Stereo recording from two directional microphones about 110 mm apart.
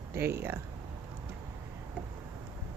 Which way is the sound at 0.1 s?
20° right (ahead or behind).